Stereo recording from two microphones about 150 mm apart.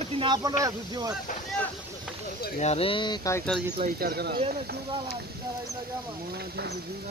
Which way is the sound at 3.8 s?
90° right.